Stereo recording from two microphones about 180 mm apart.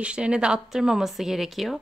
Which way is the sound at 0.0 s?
5° right (ahead or behind).